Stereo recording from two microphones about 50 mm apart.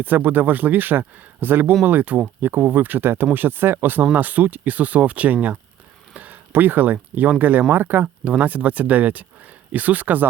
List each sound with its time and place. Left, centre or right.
0.0 s speech: right
6.1 s a sound: right
6.5 s speech: right
8.2 s speech: right